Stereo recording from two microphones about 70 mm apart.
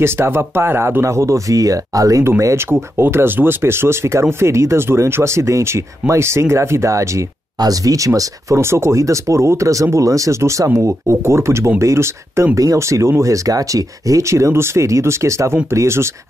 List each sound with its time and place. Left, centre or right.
0.0 s speech: right
2.5 s speech: right
7.5 s speech: right